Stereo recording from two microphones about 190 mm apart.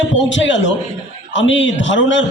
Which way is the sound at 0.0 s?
75° left (ahead or behind).